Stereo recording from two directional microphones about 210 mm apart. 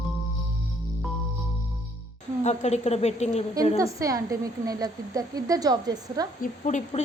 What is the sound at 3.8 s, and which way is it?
A woman's voice, 15° right (ahead or behind).